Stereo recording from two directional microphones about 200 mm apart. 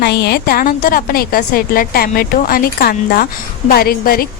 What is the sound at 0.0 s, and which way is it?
A woman's voice, 55° left (ahead or behind).